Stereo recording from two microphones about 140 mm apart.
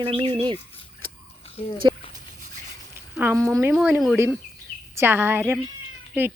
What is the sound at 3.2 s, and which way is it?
Speech, 15° right (ahead or behind).